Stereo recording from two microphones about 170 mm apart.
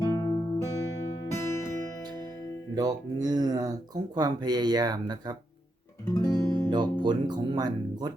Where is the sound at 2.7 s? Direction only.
20° right (ahead or behind).